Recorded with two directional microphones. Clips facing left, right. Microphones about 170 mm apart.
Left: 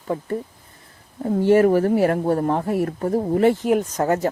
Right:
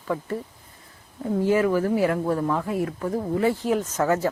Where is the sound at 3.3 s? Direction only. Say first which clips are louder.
Left 5 dB; 55° left (ahead or behind).